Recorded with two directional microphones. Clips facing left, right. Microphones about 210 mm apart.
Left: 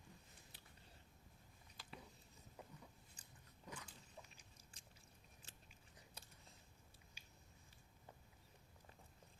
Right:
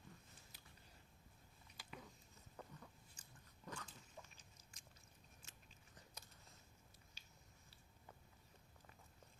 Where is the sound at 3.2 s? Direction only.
35° left (ahead or behind).